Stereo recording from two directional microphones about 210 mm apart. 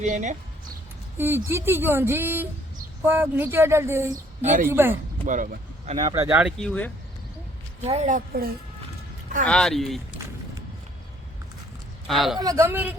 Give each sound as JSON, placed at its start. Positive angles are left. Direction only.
{"t": 0.0, "sound": "speech", "side_deg": -35}
{"t": 1.2, "sound": "speech", "side_deg": -10}
{"t": 5.2, "sound": "speech", "side_deg": -40}
{"t": 6.1, "sound": "speech", "side_deg": -10}
{"t": 6.7, "sound": "speech", "side_deg": 5}
{"t": 7.9, "sound": "speech", "side_deg": -35}
{"t": 9.4, "sound": "speech", "side_deg": 5}
{"t": 12.0, "sound": "speech", "side_deg": 0}
{"t": 12.4, "sound": "speech", "side_deg": -15}